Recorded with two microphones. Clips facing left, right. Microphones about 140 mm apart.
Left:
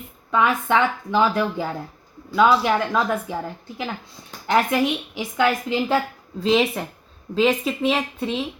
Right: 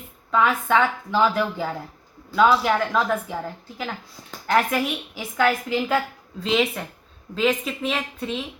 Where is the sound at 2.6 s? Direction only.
15° left (ahead or behind).